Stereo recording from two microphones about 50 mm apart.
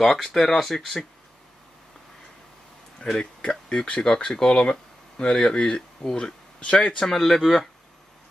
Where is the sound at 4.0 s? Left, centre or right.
Centre.